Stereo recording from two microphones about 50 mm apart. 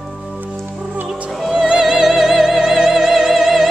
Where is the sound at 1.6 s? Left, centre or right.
Centre.